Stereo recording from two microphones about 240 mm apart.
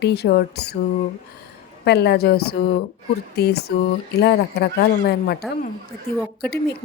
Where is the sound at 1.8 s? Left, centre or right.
Left.